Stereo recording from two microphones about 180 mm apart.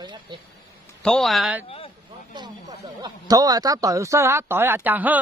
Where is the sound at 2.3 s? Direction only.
25° right (ahead or behind).